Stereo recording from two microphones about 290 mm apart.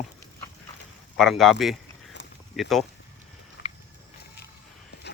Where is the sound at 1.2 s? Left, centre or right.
Centre.